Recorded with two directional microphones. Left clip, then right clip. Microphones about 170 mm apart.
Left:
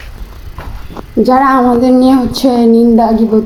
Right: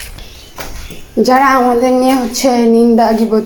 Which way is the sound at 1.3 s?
10° left (ahead or behind).